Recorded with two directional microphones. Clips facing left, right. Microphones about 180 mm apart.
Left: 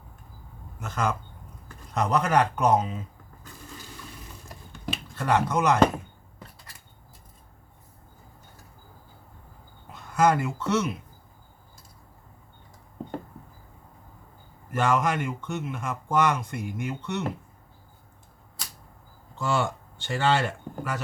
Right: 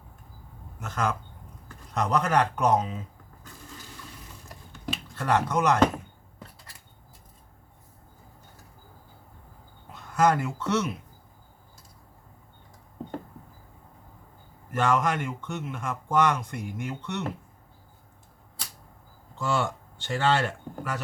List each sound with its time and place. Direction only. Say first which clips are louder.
0.8 s speech: left 1 dB; centre (ahead or behind)
5.1 s speech: left 1 dB; centre (ahead or behind)
9.9 s speech: left 1 dB; centre (ahead or behind)
14.7 s speech: even; 5° left (ahead or behind)
19.4 s speech: left 1 dB; centre (ahead or behind)